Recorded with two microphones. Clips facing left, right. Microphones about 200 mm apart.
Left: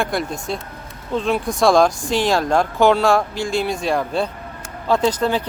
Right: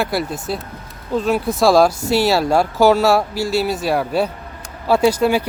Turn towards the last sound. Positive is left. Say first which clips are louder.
# right 4 dB
turn(degrees=-10)  # may be behind; listen again after turning